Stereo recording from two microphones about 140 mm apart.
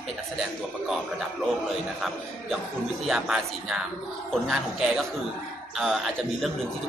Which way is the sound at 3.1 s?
5° right (ahead or behind).